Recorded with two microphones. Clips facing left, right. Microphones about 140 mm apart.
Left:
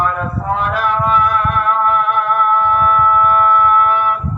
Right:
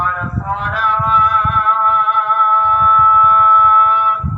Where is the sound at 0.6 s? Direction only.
55° left (ahead or behind).